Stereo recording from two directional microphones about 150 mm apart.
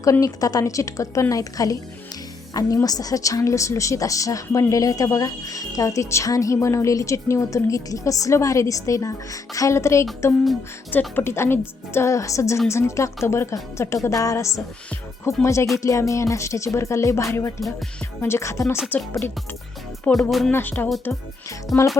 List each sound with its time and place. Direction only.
0.0 s a woman's voice: 20° left (ahead or behind)
11.1 s a woman's voice: 15° left (ahead or behind)
20.5 s a woman's voice: 15° left (ahead or behind)